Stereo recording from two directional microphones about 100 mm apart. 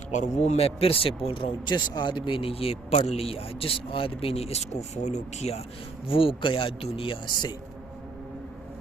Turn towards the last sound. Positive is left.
turn(degrees=45)  # may be behind; listen again after turning